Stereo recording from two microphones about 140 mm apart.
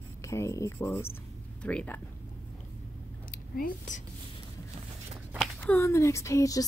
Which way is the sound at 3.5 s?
90° left.